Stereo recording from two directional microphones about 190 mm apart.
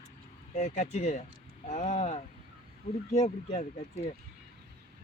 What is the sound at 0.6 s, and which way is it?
Speech, 35° left (ahead or behind).